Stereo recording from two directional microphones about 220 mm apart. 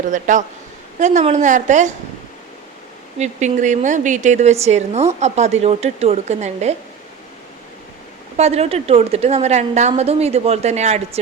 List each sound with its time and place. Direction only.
0.1 s a woman's voice: 35° right (ahead or behind)
3.2 s a woman's voice: 35° right (ahead or behind)
8.4 s a woman's voice: 30° right (ahead or behind)